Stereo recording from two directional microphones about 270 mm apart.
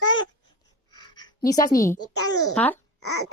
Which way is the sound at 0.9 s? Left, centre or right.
Centre.